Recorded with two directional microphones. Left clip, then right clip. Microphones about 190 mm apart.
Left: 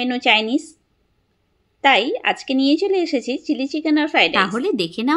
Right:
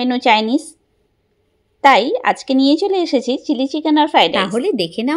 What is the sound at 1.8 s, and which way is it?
A woman's voice, 20° right (ahead or behind).